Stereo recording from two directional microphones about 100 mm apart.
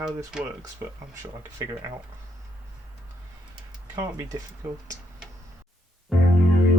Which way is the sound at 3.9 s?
35° right (ahead or behind).